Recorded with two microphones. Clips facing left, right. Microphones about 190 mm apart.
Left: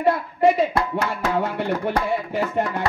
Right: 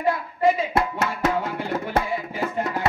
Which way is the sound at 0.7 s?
25° right (ahead or behind).